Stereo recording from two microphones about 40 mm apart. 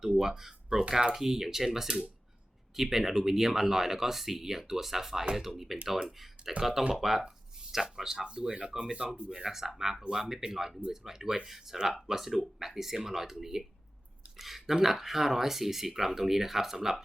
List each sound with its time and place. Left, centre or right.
0.0 s speech: centre
8.2 s speech: right
9.4 s speech: centre